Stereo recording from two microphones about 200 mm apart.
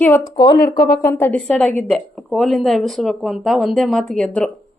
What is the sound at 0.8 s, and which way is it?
Speech, 45° left (ahead or behind).